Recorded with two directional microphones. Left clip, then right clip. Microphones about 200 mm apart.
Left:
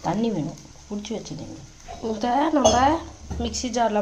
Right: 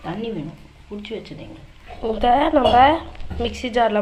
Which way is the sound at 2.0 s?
Centre (ahead or behind).